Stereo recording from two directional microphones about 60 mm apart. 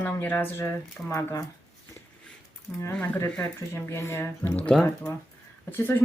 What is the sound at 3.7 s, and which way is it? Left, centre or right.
Speech, left.